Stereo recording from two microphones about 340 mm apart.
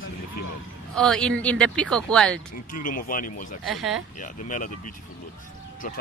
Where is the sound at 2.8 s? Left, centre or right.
Left.